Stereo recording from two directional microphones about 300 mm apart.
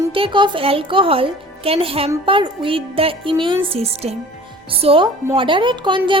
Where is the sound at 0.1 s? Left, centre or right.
Centre.